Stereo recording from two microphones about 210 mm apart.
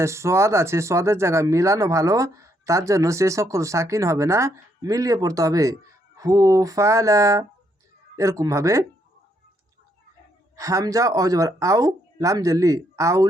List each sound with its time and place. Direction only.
0.0 s speech: 15° right (ahead or behind)
10.6 s speech: 15° right (ahead or behind)